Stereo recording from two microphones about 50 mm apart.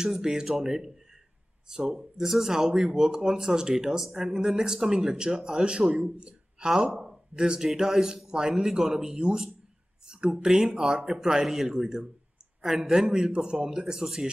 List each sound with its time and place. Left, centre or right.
0.0 s speech: centre
6.7 s speech: centre